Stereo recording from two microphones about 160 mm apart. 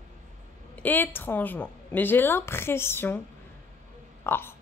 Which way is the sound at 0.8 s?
10° left (ahead or behind).